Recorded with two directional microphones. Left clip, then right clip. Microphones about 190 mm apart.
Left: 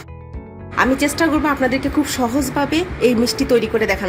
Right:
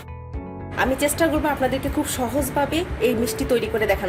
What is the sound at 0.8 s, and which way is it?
A woman's voice, 40° left (ahead or behind).